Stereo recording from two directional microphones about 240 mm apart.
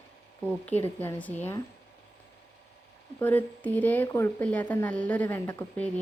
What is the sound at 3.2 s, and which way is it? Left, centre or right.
A woman's voice, centre.